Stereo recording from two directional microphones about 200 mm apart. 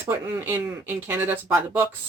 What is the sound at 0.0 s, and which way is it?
Speech, 10° right (ahead or behind).